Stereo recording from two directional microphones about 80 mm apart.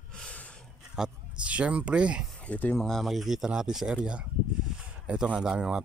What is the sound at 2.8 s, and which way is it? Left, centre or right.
Speech, centre.